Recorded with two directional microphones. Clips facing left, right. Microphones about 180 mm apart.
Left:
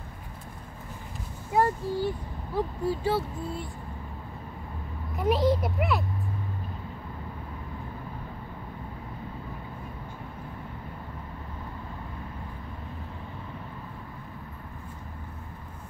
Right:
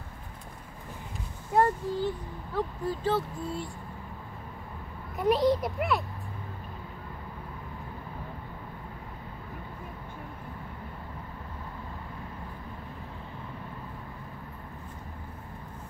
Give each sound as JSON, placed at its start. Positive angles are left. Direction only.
{"t": 1.5, "sound": "a child's voice", "side_deg": 5}
{"t": 5.1, "sound": "a child's voice", "side_deg": 0}